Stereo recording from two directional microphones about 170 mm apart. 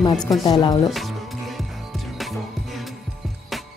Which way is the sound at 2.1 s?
Centre (ahead or behind).